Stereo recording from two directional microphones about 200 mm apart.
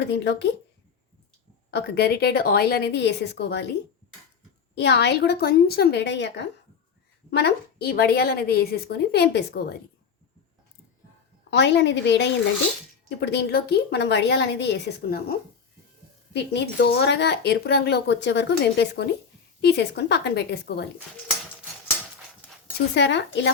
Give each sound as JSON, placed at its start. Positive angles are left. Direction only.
{"t": 0.0, "sound": "speech", "side_deg": 60}
{"t": 1.7, "sound": "speech", "side_deg": 55}
{"t": 4.7, "sound": "a woman's voice", "side_deg": 60}
{"t": 11.5, "sound": "speech", "side_deg": 60}
{"t": 23.0, "sound": "speech", "side_deg": 60}